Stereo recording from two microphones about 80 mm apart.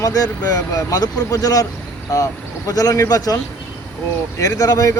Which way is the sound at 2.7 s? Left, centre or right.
Left.